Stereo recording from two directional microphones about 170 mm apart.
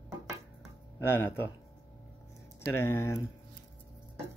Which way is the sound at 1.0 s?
15° left (ahead or behind).